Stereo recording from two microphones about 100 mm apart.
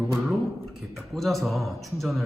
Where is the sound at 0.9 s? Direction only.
Centre (ahead or behind).